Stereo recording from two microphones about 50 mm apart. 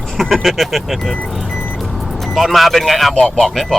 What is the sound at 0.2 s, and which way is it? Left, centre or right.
Speech, centre.